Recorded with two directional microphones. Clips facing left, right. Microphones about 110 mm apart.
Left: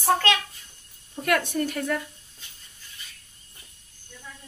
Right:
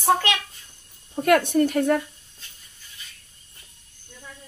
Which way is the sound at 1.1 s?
40° right (ahead or behind).